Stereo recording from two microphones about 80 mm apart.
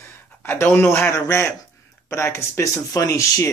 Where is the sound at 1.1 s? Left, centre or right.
Left.